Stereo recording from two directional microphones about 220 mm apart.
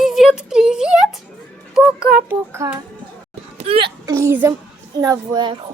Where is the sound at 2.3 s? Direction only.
10° right (ahead or behind).